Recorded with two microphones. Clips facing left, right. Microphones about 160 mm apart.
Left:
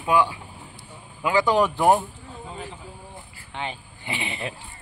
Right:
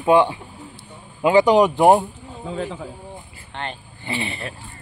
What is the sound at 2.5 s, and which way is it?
Speech, 90° right.